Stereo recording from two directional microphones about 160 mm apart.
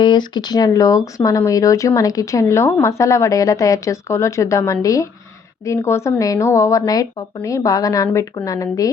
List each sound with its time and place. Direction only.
0.0 s speech: 30° left (ahead or behind)